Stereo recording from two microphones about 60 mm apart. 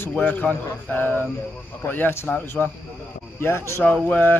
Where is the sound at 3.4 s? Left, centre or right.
Left.